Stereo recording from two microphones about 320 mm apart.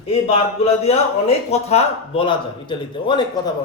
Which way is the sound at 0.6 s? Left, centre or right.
Centre.